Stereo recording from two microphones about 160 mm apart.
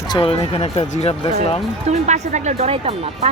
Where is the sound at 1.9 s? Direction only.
45° right (ahead or behind).